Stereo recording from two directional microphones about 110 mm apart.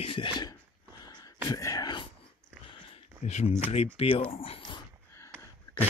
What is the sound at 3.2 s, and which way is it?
Speech, 90° left.